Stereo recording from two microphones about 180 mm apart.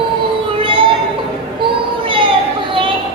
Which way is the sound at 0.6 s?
30° right (ahead or behind).